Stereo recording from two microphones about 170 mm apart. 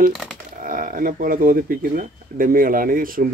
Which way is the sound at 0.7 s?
55° right (ahead or behind).